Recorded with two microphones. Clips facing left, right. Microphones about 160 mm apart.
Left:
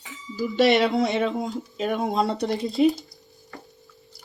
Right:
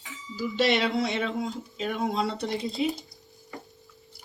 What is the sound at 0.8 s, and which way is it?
A woman's voice, 45° left (ahead or behind).